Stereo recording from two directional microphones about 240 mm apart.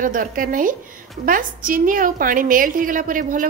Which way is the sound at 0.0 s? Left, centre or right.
Right.